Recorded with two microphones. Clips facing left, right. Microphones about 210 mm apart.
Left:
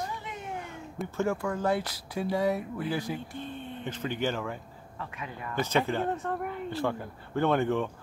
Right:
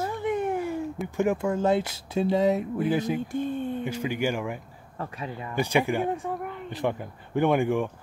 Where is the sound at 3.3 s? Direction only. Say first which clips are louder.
Right 10 dB; 45° right (ahead or behind).